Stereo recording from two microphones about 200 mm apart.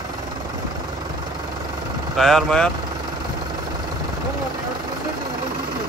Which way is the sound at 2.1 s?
Centre (ahead or behind).